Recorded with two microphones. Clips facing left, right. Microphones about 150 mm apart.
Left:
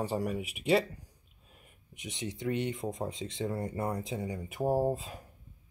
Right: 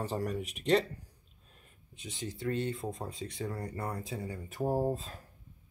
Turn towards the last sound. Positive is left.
turn(degrees=10)  # may be behind; listen again after turning